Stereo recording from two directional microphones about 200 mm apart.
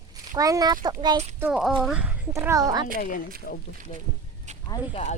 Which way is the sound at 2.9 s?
40° left (ahead or behind).